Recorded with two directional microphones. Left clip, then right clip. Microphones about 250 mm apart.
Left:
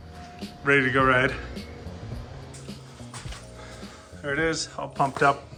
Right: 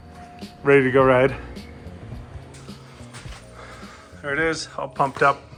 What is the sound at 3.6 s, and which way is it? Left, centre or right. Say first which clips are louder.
Speech: right 2 dB; centre.